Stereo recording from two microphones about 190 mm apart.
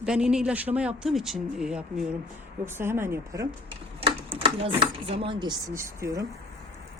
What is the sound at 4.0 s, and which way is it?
Speech, 30° right (ahead or behind).